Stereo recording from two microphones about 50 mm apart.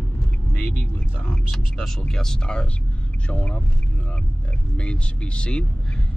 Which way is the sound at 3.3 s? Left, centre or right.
Left.